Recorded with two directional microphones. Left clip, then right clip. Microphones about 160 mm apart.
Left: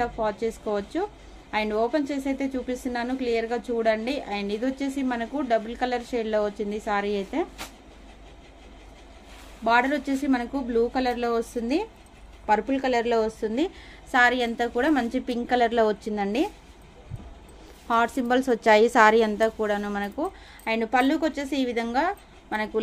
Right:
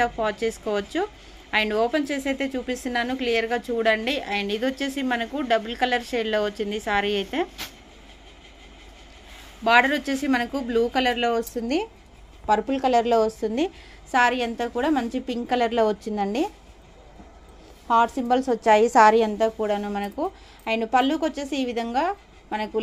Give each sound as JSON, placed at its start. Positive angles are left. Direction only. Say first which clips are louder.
{"t": 0.0, "sound": "a woman's voice", "louder": "right 3 dB", "side_deg": -5}
{"t": 9.6, "sound": "a woman's voice", "louder": "right 3 dB", "side_deg": -5}
{"t": 14.1, "sound": "a woman's voice", "louder": "even", "side_deg": -5}
{"t": 17.8, "sound": "a woman's voice", "louder": "right 3 dB", "side_deg": 0}